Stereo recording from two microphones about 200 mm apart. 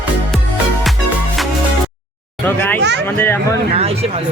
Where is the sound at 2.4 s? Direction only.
10° left (ahead or behind).